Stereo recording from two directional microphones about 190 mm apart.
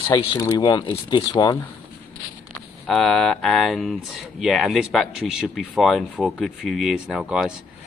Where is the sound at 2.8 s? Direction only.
Centre (ahead or behind).